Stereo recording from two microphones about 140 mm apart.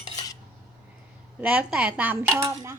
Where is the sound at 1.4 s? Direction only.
10° right (ahead or behind).